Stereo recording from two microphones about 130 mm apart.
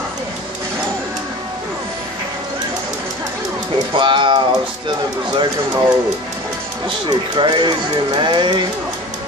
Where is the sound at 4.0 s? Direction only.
40° right (ahead or behind).